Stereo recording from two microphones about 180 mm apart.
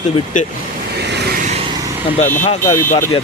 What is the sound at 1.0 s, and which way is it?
Vehicle, 65° right (ahead or behind).